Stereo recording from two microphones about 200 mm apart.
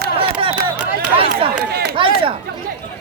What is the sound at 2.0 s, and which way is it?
Speech, 25° right (ahead or behind).